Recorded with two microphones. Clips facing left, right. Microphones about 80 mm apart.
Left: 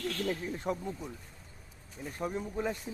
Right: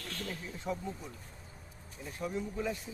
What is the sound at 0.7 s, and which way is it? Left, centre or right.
Speech, left.